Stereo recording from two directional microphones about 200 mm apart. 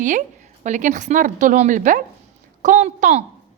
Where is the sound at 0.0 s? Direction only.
40° right (ahead or behind).